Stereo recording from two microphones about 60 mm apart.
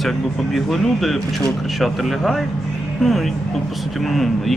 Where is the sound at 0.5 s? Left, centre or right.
Centre.